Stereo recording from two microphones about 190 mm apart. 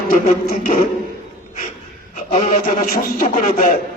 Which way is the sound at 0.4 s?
50° left (ahead or behind).